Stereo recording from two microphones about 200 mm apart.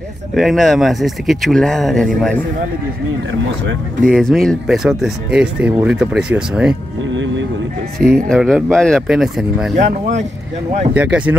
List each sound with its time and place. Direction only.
0.4 s speech: centre (ahead or behind)
4.0 s speech: centre (ahead or behind)
8.0 s speech: 45° right (ahead or behind)
8.3 s speech: centre (ahead or behind)
11.0 s speech: 5° right (ahead or behind)